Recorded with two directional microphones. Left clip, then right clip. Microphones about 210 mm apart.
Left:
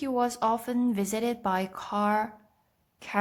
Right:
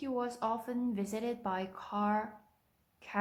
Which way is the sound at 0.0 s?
40° left (ahead or behind).